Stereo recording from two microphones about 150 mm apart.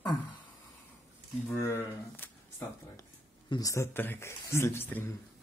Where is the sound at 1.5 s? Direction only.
15° left (ahead or behind).